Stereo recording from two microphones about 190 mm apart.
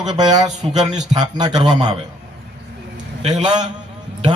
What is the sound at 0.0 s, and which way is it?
Speech, 20° right (ahead or behind).